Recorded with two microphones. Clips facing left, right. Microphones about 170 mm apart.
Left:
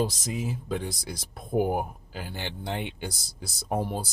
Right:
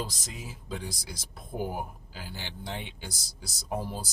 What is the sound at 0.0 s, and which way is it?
Speech, 60° left (ahead or behind).